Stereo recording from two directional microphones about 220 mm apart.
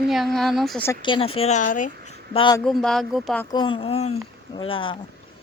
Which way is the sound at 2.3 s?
20° left (ahead or behind).